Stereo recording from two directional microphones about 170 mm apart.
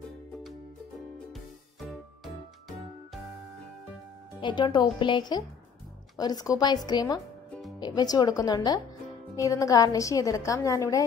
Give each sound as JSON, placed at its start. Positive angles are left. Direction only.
{"t": 1.3, "sound": "music", "side_deg": 0}
{"t": 4.4, "sound": "a woman's voice", "side_deg": 25}